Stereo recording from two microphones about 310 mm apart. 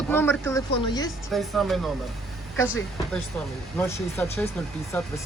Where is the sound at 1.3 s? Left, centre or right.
Centre.